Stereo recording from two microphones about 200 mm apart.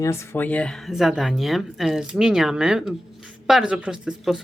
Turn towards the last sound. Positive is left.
turn(degrees=-5)  # may be behind; listen again after turning